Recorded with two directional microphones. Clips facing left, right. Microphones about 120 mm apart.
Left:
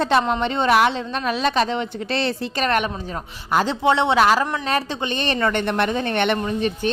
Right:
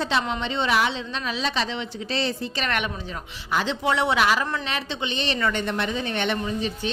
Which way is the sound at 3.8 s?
25° left (ahead or behind).